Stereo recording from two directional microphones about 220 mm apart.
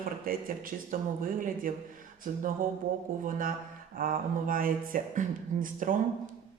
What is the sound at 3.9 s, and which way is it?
Speech, 40° right (ahead or behind).